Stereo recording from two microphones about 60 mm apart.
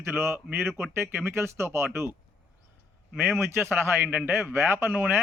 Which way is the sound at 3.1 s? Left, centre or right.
Right.